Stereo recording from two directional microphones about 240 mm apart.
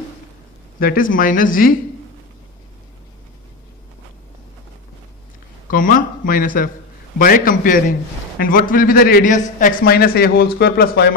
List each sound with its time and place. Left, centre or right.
0.7 s a man's voice: left
5.7 s a man's voice: left